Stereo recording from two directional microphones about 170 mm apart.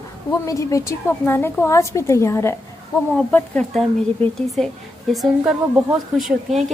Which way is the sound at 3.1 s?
5° left (ahead or behind).